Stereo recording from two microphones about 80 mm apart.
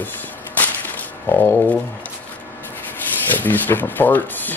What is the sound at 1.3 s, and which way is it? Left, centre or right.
Speech, left.